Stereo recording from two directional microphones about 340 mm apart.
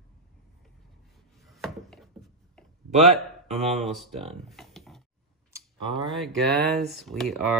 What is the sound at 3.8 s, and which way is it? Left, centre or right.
Speech, centre.